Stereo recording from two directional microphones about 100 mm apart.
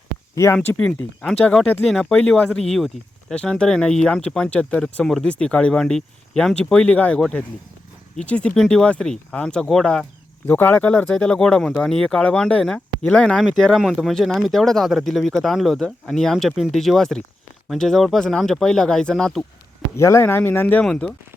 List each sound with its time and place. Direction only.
0.3 s speech: 25° left (ahead or behind)
0.9 s speech: 10° left (ahead or behind)
10.4 s speech: 20° left (ahead or behind)
20.0 s speech: 30° left (ahead or behind); by 21.1 s 10° left (ahead or behind)